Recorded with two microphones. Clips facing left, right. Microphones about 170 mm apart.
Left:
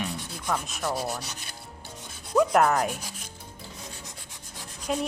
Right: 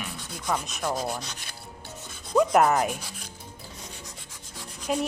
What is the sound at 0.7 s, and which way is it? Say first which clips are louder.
Speech: right 1 dB; centre (ahead or behind).